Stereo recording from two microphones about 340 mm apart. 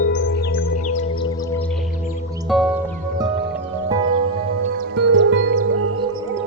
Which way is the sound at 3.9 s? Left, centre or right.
Centre.